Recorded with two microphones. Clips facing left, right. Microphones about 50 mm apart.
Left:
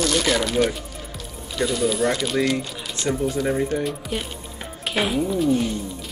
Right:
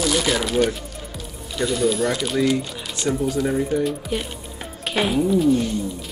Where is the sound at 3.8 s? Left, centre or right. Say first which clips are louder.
Right 3 dB; centre.